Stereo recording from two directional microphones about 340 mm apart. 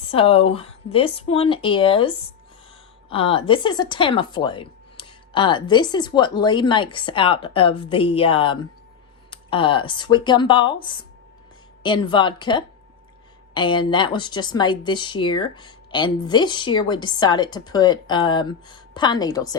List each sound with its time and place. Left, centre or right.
0.1 s a woman's voice: centre